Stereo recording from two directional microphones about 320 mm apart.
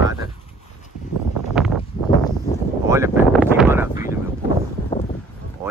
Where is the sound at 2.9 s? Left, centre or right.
Centre.